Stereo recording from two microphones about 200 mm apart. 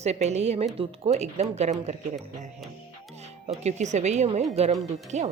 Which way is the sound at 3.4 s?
35° right (ahead or behind).